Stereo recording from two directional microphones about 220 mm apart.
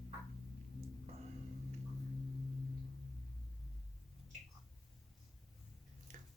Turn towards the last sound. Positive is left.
turn(degrees=-35)  # may be behind; listen again after turning